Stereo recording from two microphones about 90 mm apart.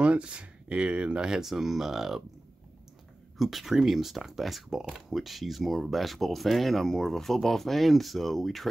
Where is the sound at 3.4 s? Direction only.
Centre (ahead or behind).